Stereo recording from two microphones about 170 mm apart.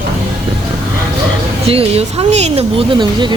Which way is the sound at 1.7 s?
35° right (ahead or behind).